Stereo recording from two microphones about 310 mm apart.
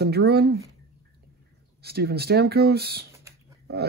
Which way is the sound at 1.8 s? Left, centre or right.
Right.